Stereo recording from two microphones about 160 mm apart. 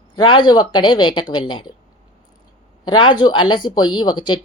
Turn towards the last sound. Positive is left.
turn(degrees=30)  # may be behind; listen again after turning